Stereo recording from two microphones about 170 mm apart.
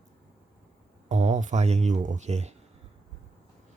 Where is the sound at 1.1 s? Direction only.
45° right (ahead or behind).